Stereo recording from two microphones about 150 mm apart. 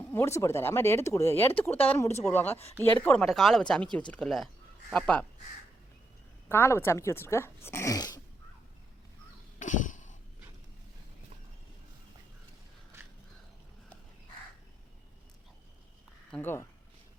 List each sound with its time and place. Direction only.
0.0 s speech: 15° left (ahead or behind)
6.5 s speech: 15° left (ahead or behind)
9.6 s a sound: 60° left (ahead or behind)
16.3 s speech: 15° left (ahead or behind)